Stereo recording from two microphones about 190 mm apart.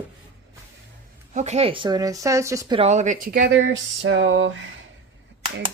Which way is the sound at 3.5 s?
85° right.